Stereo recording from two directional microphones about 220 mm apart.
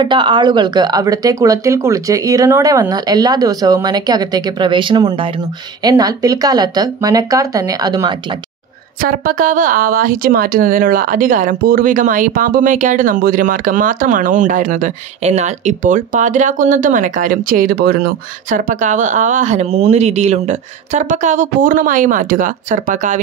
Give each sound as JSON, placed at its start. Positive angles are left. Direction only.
{"t": 0.0, "sound": "speech", "side_deg": -20}
{"t": 9.0, "sound": "a woman's voice", "side_deg": -40}